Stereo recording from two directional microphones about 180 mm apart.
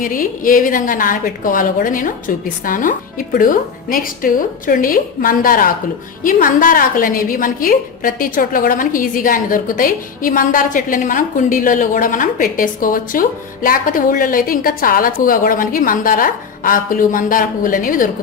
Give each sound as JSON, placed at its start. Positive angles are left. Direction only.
{"t": 0.0, "sound": "a woman's voice", "side_deg": 50}